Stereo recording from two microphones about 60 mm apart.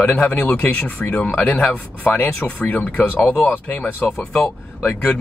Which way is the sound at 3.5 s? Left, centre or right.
Left.